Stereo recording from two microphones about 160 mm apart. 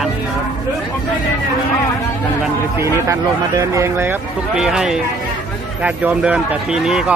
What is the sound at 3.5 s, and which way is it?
Speech, 20° right (ahead or behind).